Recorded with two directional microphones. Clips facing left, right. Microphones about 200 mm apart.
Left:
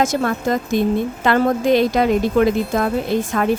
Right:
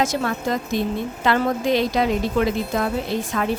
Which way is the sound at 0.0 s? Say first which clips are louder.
Left 4 dB; 50° left (ahead or behind).